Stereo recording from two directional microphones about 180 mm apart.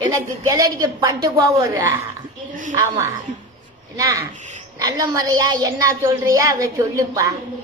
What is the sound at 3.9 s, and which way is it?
A woman's voice, 20° right (ahead or behind).